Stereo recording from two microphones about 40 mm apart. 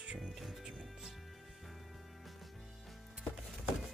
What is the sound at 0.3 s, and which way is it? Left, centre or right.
Music, centre.